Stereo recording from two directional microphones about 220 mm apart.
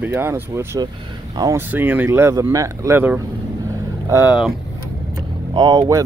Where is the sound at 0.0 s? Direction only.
10° right (ahead or behind).